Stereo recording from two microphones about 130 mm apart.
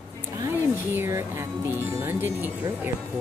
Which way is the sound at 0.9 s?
20° right (ahead or behind).